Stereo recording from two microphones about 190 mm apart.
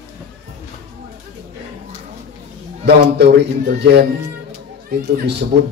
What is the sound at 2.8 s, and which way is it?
A man's voice, 60° right (ahead or behind).